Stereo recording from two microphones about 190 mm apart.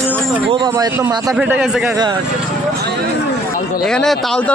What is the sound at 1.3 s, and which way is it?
Speech, 5° right (ahead or behind).